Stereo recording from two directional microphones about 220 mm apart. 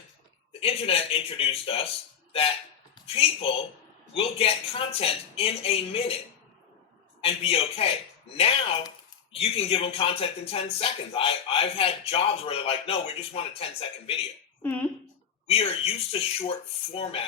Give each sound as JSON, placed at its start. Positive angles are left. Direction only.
{"t": 0.6, "sound": "speech", "side_deg": 25}
{"t": 7.2, "sound": "speech", "side_deg": 25}
{"t": 14.6, "sound": "speech", "side_deg": 10}
{"t": 15.4, "sound": "speech", "side_deg": 25}